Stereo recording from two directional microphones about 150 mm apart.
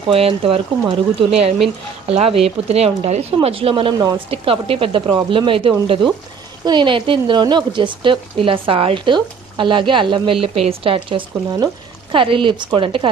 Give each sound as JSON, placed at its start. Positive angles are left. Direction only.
{"t": 0.1, "sound": "speech", "side_deg": -40}